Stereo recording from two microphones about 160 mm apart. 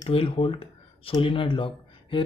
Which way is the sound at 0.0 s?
35° left (ahead or behind).